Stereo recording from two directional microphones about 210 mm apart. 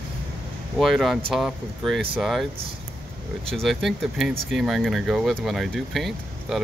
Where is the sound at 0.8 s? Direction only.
Centre (ahead or behind).